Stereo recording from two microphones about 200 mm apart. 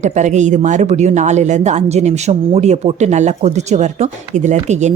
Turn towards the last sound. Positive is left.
turn(degrees=-35)  # may be behind; listen again after turning